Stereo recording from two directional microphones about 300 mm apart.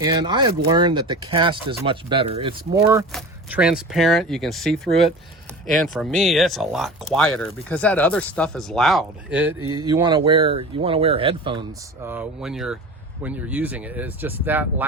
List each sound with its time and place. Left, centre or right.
0.0 s speech: centre
12.0 s speech: centre